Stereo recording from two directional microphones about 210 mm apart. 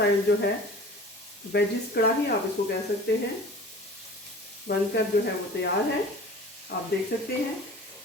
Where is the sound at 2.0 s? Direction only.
50° left (ahead or behind).